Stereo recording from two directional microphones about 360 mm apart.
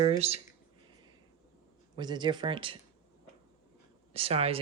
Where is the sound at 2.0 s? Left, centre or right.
Centre.